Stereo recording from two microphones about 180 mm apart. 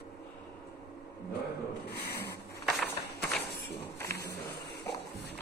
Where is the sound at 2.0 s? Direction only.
65° left (ahead or behind).